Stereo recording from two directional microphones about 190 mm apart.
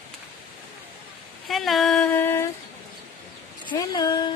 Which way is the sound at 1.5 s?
Centre (ahead or behind).